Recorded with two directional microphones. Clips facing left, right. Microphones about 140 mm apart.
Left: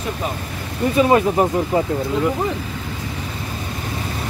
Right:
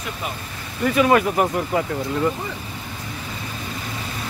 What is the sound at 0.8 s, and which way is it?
Speech, 25° left (ahead or behind).